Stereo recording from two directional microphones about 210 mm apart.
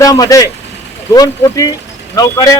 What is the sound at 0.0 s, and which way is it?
Speech, 15° left (ahead or behind).